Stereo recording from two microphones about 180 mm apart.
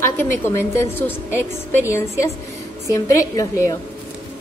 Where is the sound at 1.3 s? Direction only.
10° right (ahead or behind).